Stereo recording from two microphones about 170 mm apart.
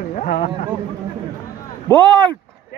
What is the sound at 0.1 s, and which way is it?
Speech, 45° left (ahead or behind).